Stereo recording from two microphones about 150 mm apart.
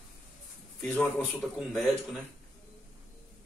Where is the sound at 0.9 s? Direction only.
5° left (ahead or behind).